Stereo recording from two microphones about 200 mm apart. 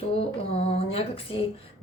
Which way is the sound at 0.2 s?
30° left (ahead or behind).